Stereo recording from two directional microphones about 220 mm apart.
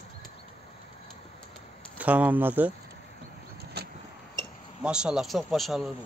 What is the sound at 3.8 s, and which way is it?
Vehicle, 45° right (ahead or behind).